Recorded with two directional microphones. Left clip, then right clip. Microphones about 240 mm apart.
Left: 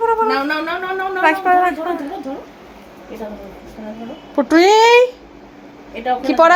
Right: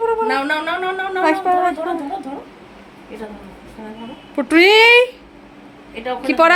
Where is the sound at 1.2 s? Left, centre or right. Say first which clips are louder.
Left 3 dB; centre.